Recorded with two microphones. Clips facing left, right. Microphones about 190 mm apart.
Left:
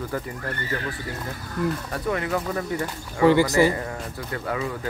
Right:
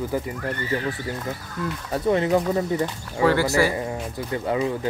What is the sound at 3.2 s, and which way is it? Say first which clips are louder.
Speech: left 2 dB; 15° left (ahead or behind).